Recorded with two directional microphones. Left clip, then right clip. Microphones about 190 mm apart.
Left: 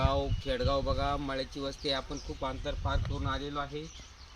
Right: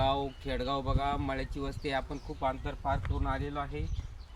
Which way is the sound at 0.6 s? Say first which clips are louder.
Left 3 dB; 10° right (ahead or behind).